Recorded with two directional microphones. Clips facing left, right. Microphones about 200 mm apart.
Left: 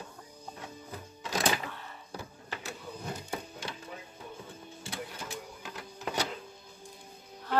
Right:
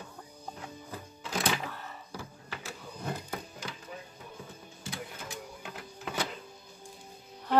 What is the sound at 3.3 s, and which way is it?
Wood, 30° left (ahead or behind).